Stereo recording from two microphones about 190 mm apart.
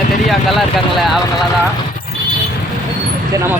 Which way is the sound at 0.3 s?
Centre (ahead or behind).